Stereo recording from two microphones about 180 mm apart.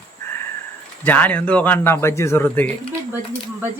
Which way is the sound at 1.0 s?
10° left (ahead or behind).